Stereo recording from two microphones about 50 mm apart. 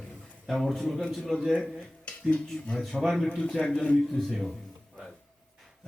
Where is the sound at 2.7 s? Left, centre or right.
Centre.